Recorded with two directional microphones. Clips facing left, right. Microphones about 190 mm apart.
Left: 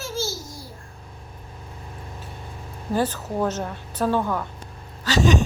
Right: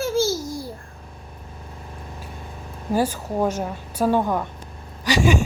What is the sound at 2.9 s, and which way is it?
A woman's voice, 10° right (ahead or behind).